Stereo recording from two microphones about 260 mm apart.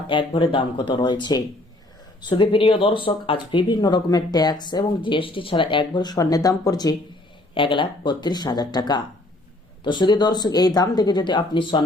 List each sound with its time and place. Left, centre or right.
0.1 s speech: centre